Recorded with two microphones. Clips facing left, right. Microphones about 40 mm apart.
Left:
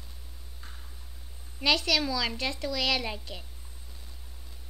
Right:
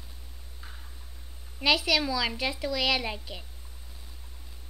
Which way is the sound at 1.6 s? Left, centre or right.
Centre.